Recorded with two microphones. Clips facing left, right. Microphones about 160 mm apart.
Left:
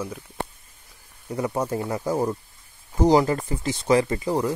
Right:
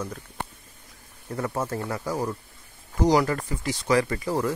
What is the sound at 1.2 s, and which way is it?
Speech, 15° left (ahead or behind).